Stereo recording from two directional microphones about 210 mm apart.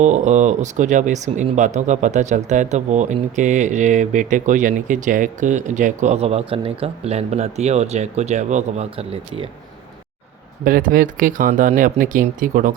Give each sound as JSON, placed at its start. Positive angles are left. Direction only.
{"t": 0.0, "sound": "speech", "side_deg": -35}
{"t": 10.6, "sound": "speech", "side_deg": -40}